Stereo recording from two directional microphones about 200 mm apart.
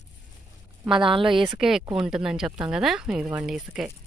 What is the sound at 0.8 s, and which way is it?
Speech, 25° right (ahead or behind).